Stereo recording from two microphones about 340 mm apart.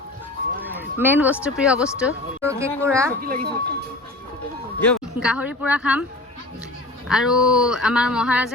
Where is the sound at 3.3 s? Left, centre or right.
Right.